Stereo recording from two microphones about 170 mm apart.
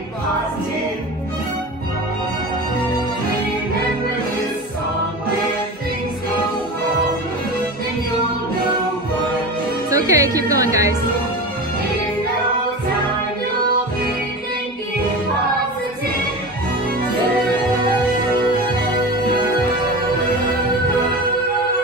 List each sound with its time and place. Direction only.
9.8 s music: 20° right (ahead or behind)